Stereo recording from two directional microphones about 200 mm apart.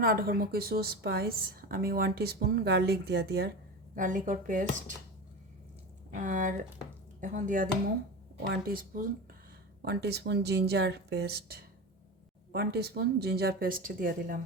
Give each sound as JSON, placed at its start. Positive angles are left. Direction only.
{"t": 0.0, "sound": "a woman's voice", "side_deg": -45}
{"t": 3.9, "sound": "speech", "side_deg": -40}
{"t": 6.1, "sound": "a woman's voice", "side_deg": -40}
{"t": 12.5, "sound": "a woman's voice", "side_deg": -50}